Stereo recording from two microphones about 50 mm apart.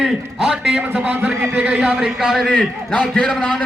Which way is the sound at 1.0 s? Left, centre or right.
Right.